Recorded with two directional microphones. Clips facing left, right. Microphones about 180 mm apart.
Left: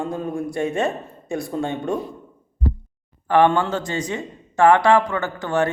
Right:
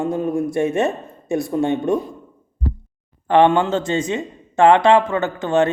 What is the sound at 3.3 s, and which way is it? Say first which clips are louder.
A man's voice: right 3 dB; 20° right (ahead or behind).